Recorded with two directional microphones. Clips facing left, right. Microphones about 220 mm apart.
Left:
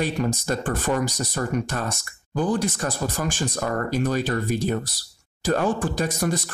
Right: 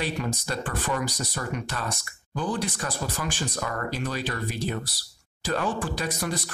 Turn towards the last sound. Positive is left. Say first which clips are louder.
# left 5 dB
turn(degrees=45)  # may be behind; listen again after turning